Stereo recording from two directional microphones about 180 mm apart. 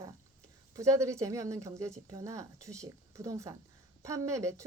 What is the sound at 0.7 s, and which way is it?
A woman's voice, 15° right (ahead or behind).